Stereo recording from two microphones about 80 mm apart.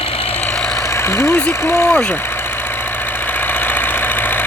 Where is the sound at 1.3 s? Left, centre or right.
Left.